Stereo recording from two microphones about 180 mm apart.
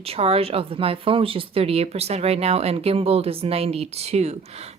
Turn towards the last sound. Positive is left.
turn(degrees=-35)  # may be behind; listen again after turning